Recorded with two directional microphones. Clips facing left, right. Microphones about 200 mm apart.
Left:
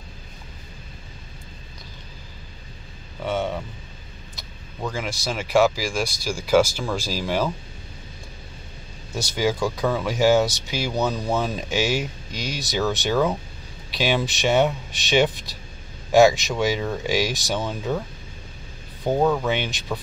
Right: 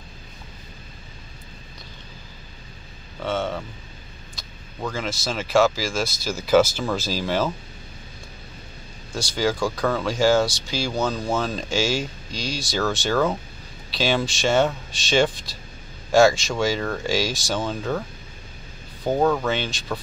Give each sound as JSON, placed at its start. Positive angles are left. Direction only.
{"t": 3.2, "sound": "speech", "side_deg": 15}
{"t": 4.9, "sound": "speech", "side_deg": 15}
{"t": 9.1, "sound": "speech", "side_deg": 20}
{"t": 19.1, "sound": "speech", "side_deg": 5}
{"t": 19.4, "sound": "speech", "side_deg": 15}